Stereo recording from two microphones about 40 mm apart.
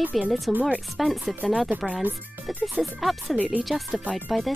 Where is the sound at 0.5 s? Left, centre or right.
Right.